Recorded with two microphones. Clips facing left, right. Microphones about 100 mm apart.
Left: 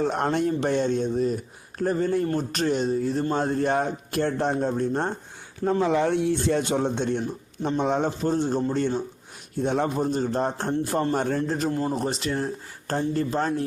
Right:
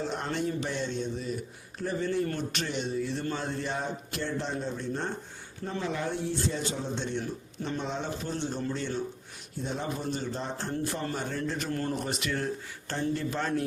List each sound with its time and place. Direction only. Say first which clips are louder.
0.0 s speech: left 8 dB; 55° left (ahead or behind)
5.8 s a man's voice: left 9 dB; 85° left; by 8.6 s 45° left (ahead or behind)
9.6 s a man's voice: left 10 dB; 65° left (ahead or behind)
10.0 s speech: left 9 dB; 40° left (ahead or behind)
11.4 s speech: left 7 dB; 40° left (ahead or behind)
11.7 s speech: left 5 dB; 20° left (ahead or behind)
11.9 s speech: left 5 dB; 30° left (ahead or behind)